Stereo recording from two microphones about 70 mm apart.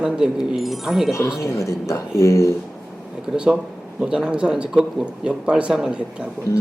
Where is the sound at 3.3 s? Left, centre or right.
Centre.